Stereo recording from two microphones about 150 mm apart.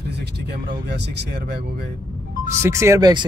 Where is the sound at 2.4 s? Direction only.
20° right (ahead or behind).